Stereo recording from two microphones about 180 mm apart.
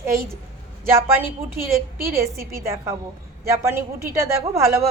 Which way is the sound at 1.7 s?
55° right (ahead or behind).